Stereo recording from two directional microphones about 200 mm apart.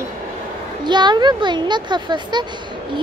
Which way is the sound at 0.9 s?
20° right (ahead or behind).